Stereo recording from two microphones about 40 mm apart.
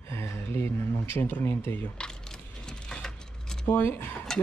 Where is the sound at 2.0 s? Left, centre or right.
Centre.